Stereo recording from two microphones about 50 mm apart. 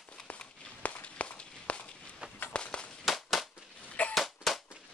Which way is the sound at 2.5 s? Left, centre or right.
Left.